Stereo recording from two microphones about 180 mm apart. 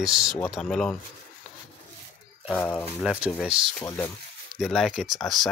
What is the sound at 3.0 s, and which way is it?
Speech, 5° right (ahead or behind).